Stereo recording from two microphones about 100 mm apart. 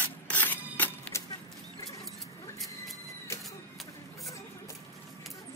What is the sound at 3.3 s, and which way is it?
Printer, 30° left (ahead or behind).